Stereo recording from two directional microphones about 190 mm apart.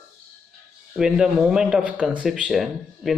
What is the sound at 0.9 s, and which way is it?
Speech, 5° right (ahead or behind).